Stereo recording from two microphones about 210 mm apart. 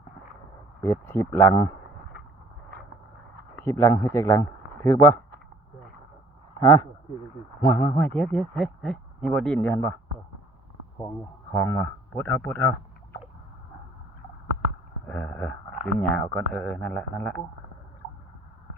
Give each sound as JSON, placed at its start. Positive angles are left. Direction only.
{"t": 0.8, "sound": "speech", "side_deg": 10}
{"t": 3.5, "sound": "a man's voice", "side_deg": 10}
{"t": 6.6, "sound": "speech", "side_deg": 15}
{"t": 11.5, "sound": "speech", "side_deg": 10}
{"t": 15.0, "sound": "speech", "side_deg": 10}